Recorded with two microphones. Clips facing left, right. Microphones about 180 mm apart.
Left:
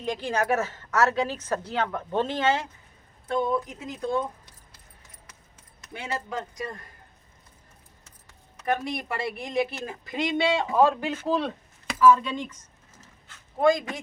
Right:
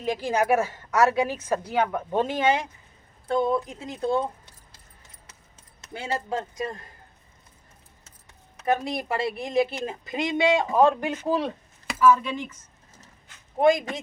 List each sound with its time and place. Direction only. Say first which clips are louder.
0.0 s a woman's voice: right 3 dB; 10° right (ahead or behind)
3.2 s a woman's voice: right 2 dB; 30° right (ahead or behind)
5.8 s a woman's voice: right 3 dB; 30° right (ahead or behind)
8.6 s a woman's voice: right 3 dB; 25° right (ahead or behind); by 12.5 s 10° right (ahead or behind)
13.2 s a sound: right 2 dB; 20° right (ahead or behind)